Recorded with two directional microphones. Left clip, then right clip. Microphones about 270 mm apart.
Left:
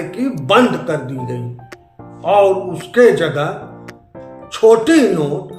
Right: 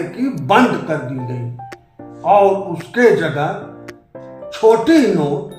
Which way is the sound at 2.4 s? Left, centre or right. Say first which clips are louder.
Even; centre.